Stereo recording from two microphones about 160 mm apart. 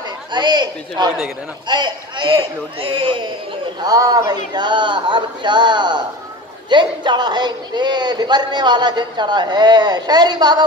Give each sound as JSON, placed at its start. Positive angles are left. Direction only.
{"t": 0.3, "sound": "speech", "side_deg": -30}